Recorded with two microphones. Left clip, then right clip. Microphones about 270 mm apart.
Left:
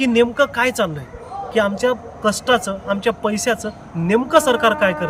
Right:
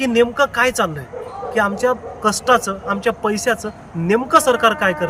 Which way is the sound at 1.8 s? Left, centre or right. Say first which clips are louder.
Right 1 dB; centre.